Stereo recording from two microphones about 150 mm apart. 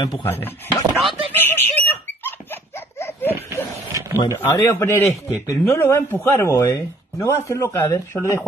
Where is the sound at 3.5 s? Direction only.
20° right (ahead or behind).